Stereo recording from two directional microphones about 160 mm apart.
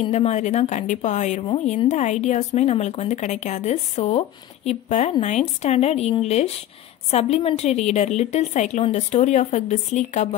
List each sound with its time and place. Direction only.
0.0 s speech: 45° left (ahead or behind)